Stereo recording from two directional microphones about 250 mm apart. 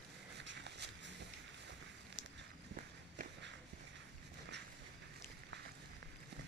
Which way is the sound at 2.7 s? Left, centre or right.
Right.